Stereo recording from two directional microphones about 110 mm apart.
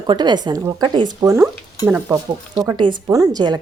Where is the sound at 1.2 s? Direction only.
20° right (ahead or behind).